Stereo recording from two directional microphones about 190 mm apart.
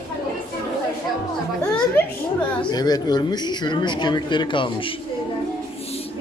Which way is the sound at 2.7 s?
20° left (ahead or behind).